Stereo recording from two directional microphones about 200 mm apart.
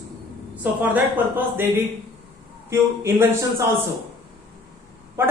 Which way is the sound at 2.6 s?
15° right (ahead or behind).